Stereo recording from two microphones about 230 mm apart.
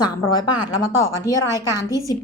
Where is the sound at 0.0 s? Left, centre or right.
Centre.